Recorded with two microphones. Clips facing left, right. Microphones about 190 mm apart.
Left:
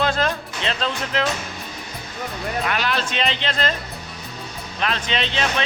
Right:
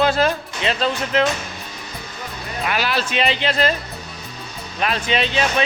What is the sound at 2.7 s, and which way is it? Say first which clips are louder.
A man's voice: right 5 dB; 5° right (ahead or behind).